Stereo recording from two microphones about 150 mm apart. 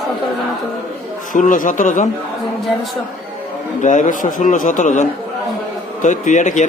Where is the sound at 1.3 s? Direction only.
60° left (ahead or behind).